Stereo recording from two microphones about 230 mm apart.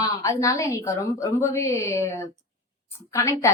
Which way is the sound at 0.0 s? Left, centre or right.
Centre.